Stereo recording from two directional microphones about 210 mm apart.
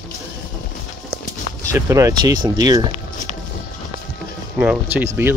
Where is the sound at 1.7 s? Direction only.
15° right (ahead or behind).